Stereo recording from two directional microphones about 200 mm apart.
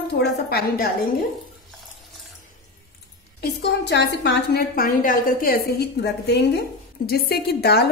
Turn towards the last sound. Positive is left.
turn(degrees=50)  # may be behind; listen again after turning